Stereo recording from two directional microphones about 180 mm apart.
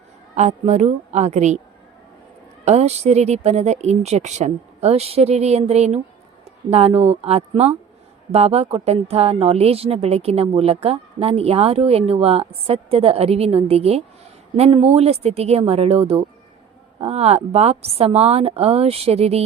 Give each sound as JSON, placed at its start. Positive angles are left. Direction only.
{"t": 0.3, "sound": "a woman's voice", "side_deg": -40}
{"t": 2.6, "sound": "a woman's voice", "side_deg": -35}